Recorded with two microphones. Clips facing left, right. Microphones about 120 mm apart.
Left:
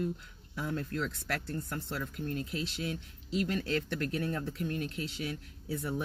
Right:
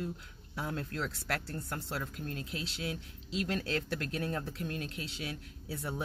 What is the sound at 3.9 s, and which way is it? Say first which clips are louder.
Speech: left 2 dB; 30° right (ahead or behind).